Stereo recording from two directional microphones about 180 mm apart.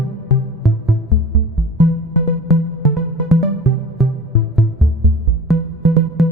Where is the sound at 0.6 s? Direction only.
Centre (ahead or behind).